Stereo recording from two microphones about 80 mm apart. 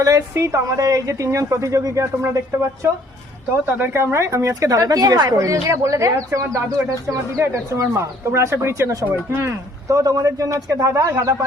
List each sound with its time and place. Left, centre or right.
0.0 s a woman's voice: right
3.7 s a woman's voice: right